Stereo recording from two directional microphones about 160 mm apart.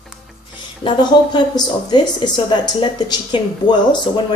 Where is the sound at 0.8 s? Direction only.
25° left (ahead or behind).